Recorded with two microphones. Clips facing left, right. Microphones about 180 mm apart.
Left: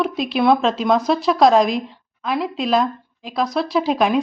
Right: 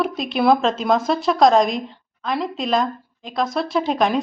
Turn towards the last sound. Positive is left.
turn(degrees=5)  # may be behind; listen again after turning